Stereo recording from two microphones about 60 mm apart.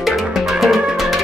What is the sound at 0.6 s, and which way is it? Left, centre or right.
Music, centre.